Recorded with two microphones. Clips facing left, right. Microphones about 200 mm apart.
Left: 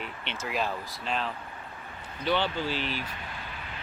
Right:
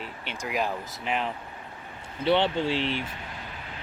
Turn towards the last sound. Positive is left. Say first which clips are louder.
# right 5 dB
turn(degrees=-25)  # may be behind; listen again after turning